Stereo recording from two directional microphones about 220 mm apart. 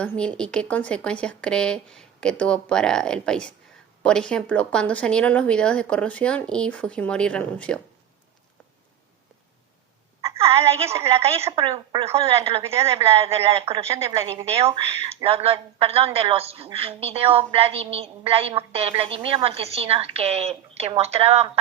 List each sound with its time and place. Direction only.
0.0 s speech: 5° left (ahead or behind)
10.5 s a woman's voice: 25° right (ahead or behind)